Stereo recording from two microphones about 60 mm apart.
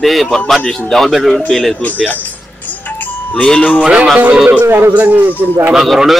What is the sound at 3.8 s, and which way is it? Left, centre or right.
Music, centre.